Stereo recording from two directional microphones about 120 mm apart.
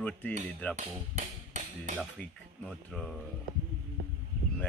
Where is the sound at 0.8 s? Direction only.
75° right (ahead or behind).